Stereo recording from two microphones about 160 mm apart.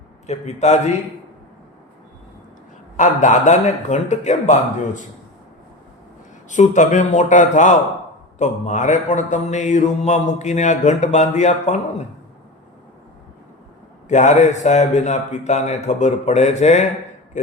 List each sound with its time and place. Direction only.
0.3 s mantra: 45° left (ahead or behind)
3.0 s mantra: 50° left (ahead or behind)
6.5 s mantra: 50° left (ahead or behind)
14.1 s mantra: 50° left (ahead or behind)